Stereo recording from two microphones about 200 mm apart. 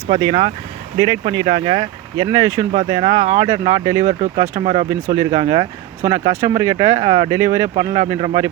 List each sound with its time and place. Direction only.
0.2 s speech: 25° right (ahead or behind)
4.6 s speech: 30° right (ahead or behind)
4.9 s speech: 15° right (ahead or behind)